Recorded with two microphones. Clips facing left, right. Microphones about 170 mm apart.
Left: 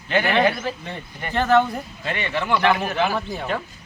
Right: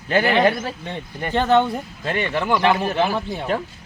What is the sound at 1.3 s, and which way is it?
Speech, 25° right (ahead or behind).